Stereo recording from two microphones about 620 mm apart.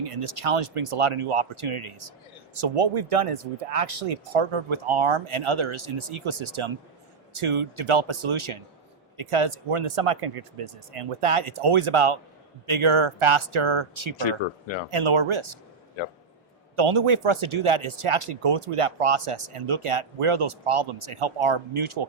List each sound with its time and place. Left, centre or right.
0.0 s speech: right
14.2 s speech: left
14.8 s speech: right
16.7 s speech: right